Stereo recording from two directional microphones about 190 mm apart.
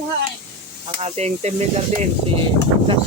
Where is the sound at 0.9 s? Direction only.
35° right (ahead or behind).